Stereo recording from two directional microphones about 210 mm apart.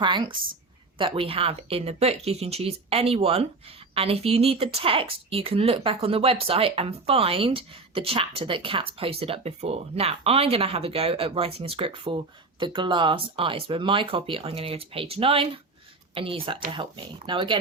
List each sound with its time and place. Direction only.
0.0 s speech: 20° right (ahead or behind)